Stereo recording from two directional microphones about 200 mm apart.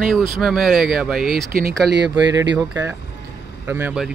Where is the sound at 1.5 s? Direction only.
45° right (ahead or behind).